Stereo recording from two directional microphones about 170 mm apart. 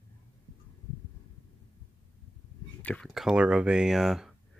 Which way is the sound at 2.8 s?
5° left (ahead or behind).